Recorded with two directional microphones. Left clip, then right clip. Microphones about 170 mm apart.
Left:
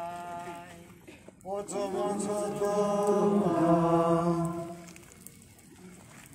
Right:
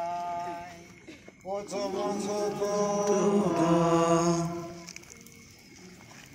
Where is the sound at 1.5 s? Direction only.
5° right (ahead or behind).